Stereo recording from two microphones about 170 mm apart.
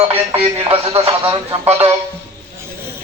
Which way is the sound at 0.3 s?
35° right (ahead or behind).